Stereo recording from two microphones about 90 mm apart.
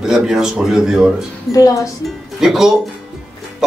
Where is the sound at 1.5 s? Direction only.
40° left (ahead or behind).